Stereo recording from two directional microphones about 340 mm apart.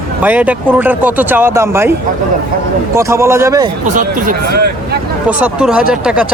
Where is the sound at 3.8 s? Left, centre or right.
Right.